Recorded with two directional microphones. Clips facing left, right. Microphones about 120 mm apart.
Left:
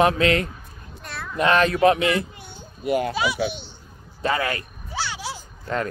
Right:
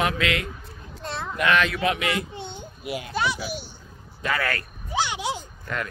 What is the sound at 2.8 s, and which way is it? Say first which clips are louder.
Speech: left 10 dB; 50° left (ahead or behind).